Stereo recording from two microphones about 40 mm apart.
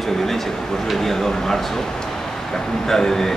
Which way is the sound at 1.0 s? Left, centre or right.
Centre.